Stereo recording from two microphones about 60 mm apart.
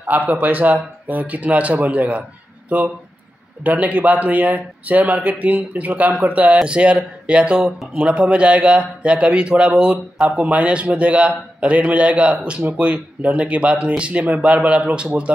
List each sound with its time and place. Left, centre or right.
0.3 s a man's voice: right